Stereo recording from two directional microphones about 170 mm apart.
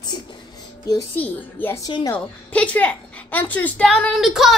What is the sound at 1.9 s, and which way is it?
Speech, 25° left (ahead or behind).